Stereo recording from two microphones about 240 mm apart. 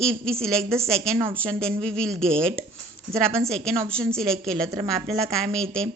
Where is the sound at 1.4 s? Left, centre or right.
Centre.